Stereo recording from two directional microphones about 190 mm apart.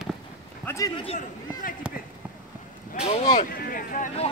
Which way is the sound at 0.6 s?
15° left (ahead or behind).